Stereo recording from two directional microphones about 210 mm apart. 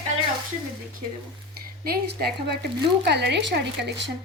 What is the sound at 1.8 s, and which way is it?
Speech, 45° right (ahead or behind).